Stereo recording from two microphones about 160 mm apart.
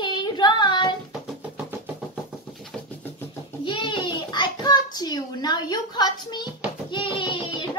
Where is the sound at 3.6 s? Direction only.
30° left (ahead or behind).